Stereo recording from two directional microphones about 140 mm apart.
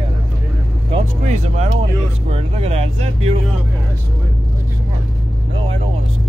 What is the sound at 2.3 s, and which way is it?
Speech, 45° right (ahead or behind).